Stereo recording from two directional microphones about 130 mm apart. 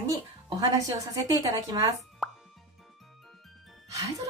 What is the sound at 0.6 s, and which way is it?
A woman's voice, 30° right (ahead or behind).